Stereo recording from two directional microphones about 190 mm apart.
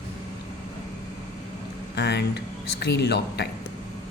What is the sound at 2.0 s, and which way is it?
Speech, 60° left (ahead or behind).